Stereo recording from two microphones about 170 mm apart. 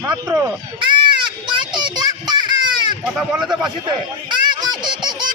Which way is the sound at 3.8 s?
25° right (ahead or behind).